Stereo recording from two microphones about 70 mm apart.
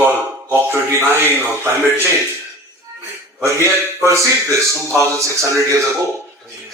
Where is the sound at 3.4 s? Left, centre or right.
Right.